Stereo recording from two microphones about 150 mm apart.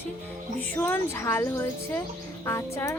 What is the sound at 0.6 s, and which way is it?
Speech, 10° left (ahead or behind).